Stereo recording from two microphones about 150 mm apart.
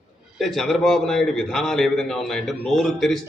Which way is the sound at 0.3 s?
Centre (ahead or behind).